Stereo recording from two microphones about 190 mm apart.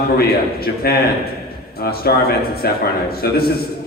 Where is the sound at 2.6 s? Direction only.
55° left (ahead or behind).